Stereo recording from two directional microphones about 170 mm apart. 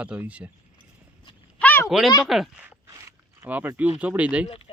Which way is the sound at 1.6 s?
10° left (ahead or behind).